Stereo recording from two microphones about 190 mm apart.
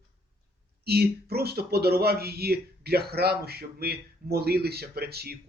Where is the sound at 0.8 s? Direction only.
55° right (ahead or behind).